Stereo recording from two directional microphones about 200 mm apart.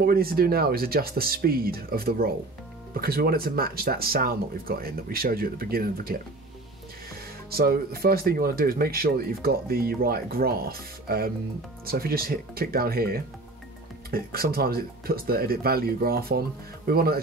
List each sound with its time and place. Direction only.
0.0 s speech: 50° right (ahead or behind)
7.5 s speech: 50° right (ahead or behind)